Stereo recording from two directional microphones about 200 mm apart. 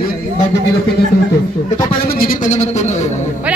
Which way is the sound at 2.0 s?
45° left (ahead or behind).